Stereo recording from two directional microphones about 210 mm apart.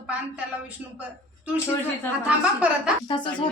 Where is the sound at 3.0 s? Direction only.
20° left (ahead or behind).